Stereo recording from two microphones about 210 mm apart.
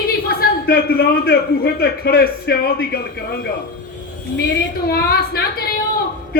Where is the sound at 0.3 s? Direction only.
45° left (ahead or behind).